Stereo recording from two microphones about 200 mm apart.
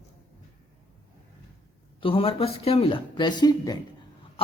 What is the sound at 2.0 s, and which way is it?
Speech, 25° left (ahead or behind).